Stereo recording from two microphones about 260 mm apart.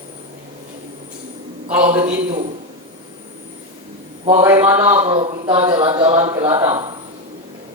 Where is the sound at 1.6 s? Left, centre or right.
Centre.